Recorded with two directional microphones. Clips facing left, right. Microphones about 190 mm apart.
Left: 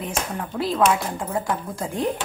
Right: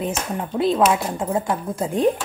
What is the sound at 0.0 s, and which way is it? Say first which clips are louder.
Speech: right 3 dB; 20° right (ahead or behind).